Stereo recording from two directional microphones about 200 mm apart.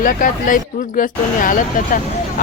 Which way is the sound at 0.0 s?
40° left (ahead or behind).